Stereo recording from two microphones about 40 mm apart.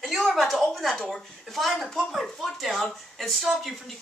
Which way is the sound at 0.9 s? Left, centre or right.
Centre.